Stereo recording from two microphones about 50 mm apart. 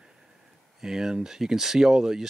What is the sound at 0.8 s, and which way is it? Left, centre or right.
Speech, centre.